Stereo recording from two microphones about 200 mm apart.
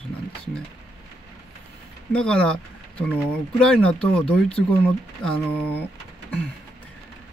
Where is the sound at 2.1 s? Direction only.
5° left (ahead or behind).